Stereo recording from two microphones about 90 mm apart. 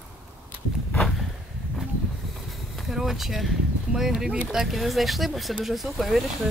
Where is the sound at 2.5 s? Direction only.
Centre (ahead or behind).